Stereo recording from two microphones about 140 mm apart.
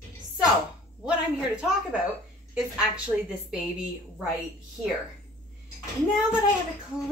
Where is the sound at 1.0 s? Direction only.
5° right (ahead or behind).